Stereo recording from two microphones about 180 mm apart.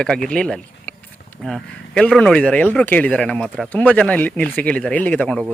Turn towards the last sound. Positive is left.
turn(degrees=5)  # may be behind; listen again after turning